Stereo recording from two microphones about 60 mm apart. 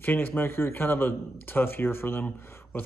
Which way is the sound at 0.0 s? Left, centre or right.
Left.